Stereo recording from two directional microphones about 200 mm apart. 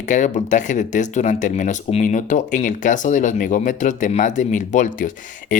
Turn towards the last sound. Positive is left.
turn(degrees=40)  # may be behind; listen again after turning